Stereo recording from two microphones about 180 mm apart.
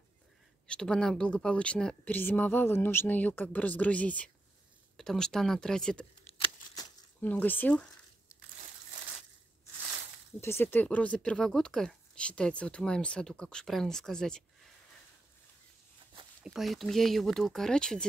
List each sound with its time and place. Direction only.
0.7 s a woman's voice: 5° left (ahead or behind)
6.3 s a sound: 25° left (ahead or behind)
7.2 s a woman's voice: 10° left (ahead or behind)
10.4 s speech: 15° left (ahead or behind)
16.4 s speech: centre (ahead or behind)